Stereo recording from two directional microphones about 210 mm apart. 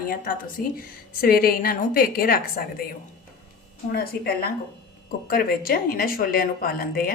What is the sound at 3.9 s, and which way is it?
Speech, 50° left (ahead or behind).